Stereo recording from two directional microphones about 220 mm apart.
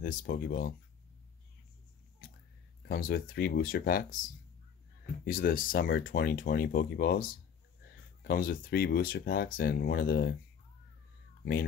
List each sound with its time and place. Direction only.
0.0 s speech: 40° left (ahead or behind)
2.9 s speech: 40° left (ahead or behind)
5.2 s speech: 40° left (ahead or behind)